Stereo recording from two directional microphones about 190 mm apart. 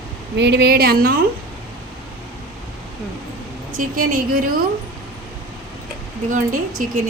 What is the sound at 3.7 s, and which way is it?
Speech, 45° right (ahead or behind).